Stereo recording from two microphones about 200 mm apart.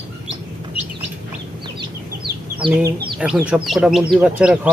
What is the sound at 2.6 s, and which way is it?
Speech, 25° right (ahead or behind).